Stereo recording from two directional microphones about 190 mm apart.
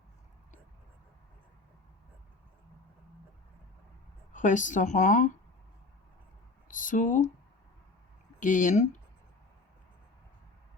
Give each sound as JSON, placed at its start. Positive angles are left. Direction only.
{"t": 4.3, "sound": "a woman's voice", "side_deg": 40}
{"t": 6.7, "sound": "speech", "side_deg": 45}
{"t": 8.4, "sound": "a woman's voice", "side_deg": 40}